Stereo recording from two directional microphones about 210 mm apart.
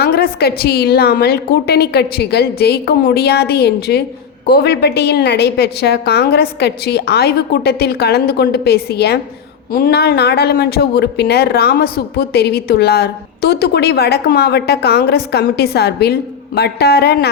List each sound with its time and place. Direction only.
0.0 s speech: 45° left (ahead or behind)